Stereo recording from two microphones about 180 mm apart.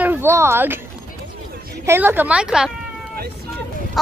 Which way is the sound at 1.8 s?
10° right (ahead or behind).